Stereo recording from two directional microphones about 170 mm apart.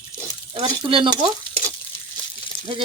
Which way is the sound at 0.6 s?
30° right (ahead or behind).